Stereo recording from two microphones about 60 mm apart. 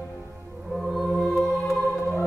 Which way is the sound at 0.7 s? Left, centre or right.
Centre.